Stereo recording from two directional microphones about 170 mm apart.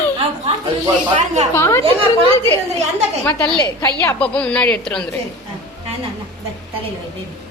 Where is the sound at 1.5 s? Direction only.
15° left (ahead or behind).